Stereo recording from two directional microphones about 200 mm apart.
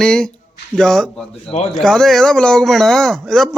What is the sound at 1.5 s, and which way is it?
Speech, 35° left (ahead or behind).